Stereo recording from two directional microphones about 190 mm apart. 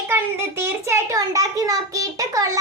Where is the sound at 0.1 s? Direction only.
10° right (ahead or behind).